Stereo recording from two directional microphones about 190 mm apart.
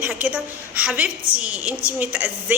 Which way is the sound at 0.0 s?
10° right (ahead or behind).